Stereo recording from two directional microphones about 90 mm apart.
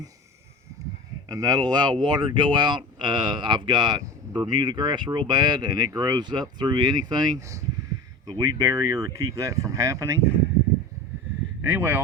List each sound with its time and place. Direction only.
1.3 s speech: 45° right (ahead or behind)
7.3 s speech: 35° right (ahead or behind)
11.6 s speech: 25° right (ahead or behind)